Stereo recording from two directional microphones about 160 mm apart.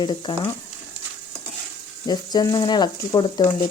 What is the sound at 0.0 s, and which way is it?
Speech, 30° left (ahead or behind).